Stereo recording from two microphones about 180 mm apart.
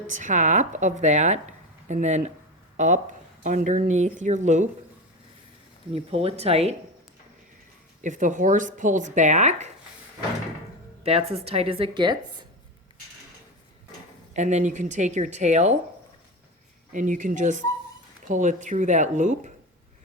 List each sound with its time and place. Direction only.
0.1 s speech: 45° right (ahead or behind)
5.9 s speech: 35° right (ahead or behind)
8.0 s speech: 45° right (ahead or behind)
11.0 s speech: 35° right (ahead or behind)
14.3 s speech: 40° right (ahead or behind)
16.9 s speech: 45° right (ahead or behind)